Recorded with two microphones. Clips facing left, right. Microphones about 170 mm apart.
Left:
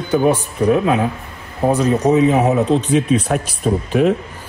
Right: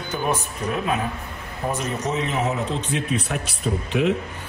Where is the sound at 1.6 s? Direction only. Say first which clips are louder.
Left 11 dB; 65° left (ahead or behind).